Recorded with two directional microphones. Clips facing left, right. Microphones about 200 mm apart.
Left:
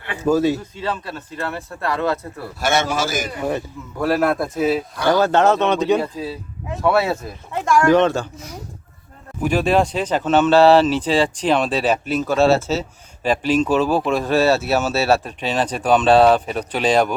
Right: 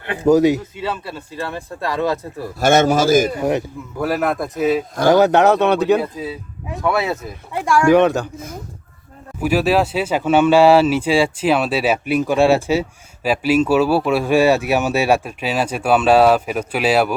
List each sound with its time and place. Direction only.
0.3 s speech: 15° right (ahead or behind)
2.6 s a man's voice: 45° right (ahead or behind)
3.3 s speech: 15° right (ahead or behind)
3.9 s a man's voice: centre (ahead or behind)
5.0 s a man's voice: 20° right (ahead or behind); by 7.3 s centre (ahead or behind)
7.5 s speech: 10° right (ahead or behind)
9.4 s speech: 5° right (ahead or behind)